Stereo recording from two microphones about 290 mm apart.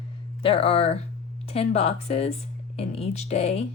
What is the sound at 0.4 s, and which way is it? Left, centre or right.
Speech, centre.